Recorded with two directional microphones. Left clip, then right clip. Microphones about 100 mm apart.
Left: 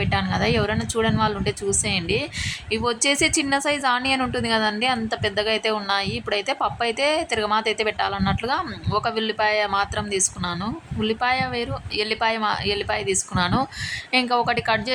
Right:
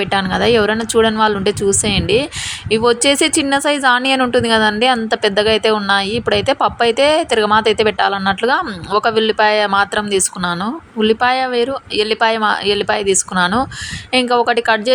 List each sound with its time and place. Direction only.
0.0 s a woman's voice: 45° right (ahead or behind)